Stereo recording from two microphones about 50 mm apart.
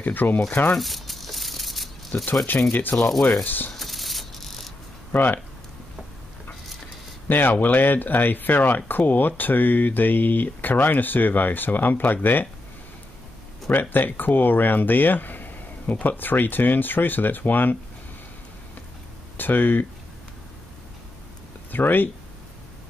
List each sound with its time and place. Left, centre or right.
0.0 s speech: left
0.7 s crumpling: centre
2.7 s speech: left
3.4 s a sound: left
3.7 s a sound: centre
5.1 s speech: left
7.2 s speech: left
13.7 s speech: left
19.3 s speech: left
21.7 s speech: left